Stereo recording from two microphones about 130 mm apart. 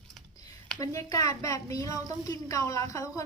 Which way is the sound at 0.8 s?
25° left (ahead or behind).